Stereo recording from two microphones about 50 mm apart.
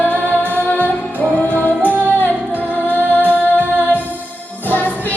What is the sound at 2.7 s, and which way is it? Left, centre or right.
Music, left.